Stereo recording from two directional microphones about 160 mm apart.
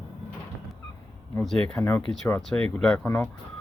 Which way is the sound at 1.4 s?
Centre (ahead or behind).